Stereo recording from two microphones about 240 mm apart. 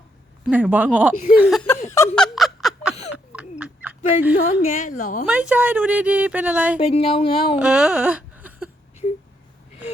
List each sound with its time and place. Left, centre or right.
0.4 s speech: centre
2.1 s snicker: centre
3.6 s a sound: centre
4.6 s a woman's voice: left
5.2 s speech: centre
6.7 s speech: left
7.5 s speech: centre